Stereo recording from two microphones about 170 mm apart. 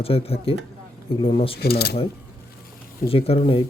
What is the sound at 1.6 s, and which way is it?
Speech, 65° left (ahead or behind).